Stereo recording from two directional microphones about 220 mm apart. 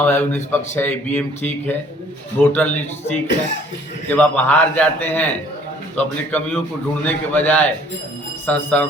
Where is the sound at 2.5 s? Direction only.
10° left (ahead or behind).